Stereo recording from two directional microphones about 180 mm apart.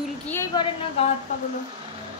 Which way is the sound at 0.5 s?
25° left (ahead or behind).